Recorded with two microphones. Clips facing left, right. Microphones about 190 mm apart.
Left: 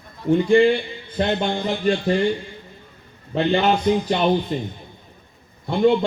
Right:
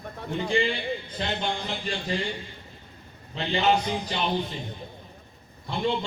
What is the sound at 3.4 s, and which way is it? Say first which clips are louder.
Speech: left 5 dB; 55° left (ahead or behind).